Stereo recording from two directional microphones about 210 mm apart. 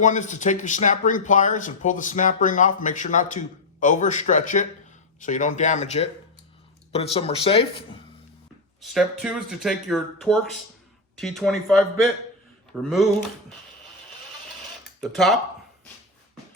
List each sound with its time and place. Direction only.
0.0 s speech: 35° left (ahead or behind)
8.8 s speech: centre (ahead or behind)
15.0 s speech: centre (ahead or behind)